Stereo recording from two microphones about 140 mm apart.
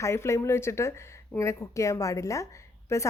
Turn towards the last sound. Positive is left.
turn(degrees=20)  # may be behind; listen again after turning